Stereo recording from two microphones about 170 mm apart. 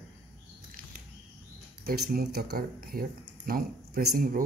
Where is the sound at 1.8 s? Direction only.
60° right (ahead or behind).